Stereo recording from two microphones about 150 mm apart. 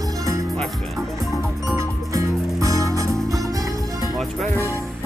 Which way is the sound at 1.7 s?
20° right (ahead or behind).